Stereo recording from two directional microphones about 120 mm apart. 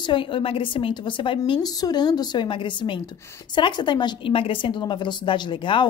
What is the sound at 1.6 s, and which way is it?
A woman's voice, 30° left (ahead or behind).